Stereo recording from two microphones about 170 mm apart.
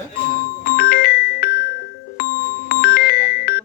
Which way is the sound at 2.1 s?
65° left (ahead or behind).